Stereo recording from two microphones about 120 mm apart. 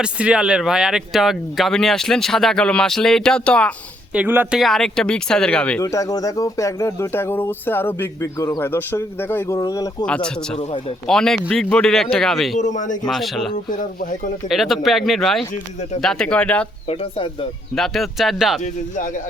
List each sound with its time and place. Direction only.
0.0 s speech: 10° right (ahead or behind); by 3.8 s 10° left (ahead or behind)
4.1 s speech: 15° right (ahead or behind)
4.5 s speech: centre (ahead or behind)
5.8 s speech: 30° left (ahead or behind)
9.6 s speech: 30° left (ahead or behind)
10.1 s speech: 5° left (ahead or behind)
10.6 s speech: 55° left (ahead or behind)
11.0 s speech: 5° left (ahead or behind)
12.5 s speech: 90° left
13.1 s speech: centre (ahead or behind)
16.8 s speech: 55° left (ahead or behind)
17.7 s speech: centre (ahead or behind)
18.6 s speech: 90° left